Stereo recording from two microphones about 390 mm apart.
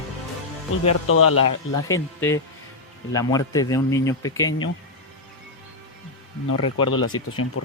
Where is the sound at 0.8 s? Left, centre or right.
Left.